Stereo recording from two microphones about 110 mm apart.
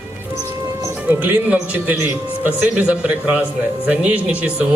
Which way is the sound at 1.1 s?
15° right (ahead or behind).